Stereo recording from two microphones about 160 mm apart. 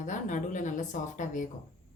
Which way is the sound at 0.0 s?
50° left (ahead or behind).